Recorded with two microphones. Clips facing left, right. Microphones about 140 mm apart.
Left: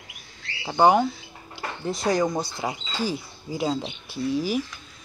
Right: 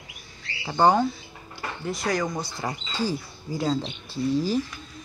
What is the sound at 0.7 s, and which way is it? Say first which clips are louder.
Speech: left 2 dB; 15° left (ahead or behind).